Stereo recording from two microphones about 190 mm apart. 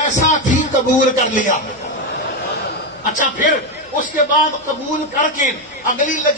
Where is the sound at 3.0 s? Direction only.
45° left (ahead or behind).